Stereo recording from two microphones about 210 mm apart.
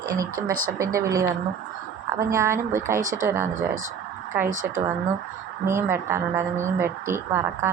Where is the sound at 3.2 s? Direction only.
10° right (ahead or behind).